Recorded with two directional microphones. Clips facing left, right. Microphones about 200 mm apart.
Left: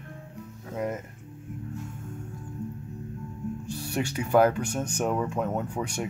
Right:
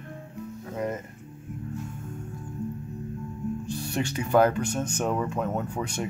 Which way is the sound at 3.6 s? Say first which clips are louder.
Left 2 dB; 10° left (ahead or behind).